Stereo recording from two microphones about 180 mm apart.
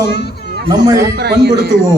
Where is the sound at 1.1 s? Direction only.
65° right (ahead or behind).